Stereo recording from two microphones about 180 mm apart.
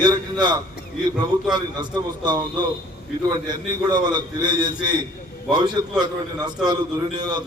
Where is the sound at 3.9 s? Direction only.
25° right (ahead or behind).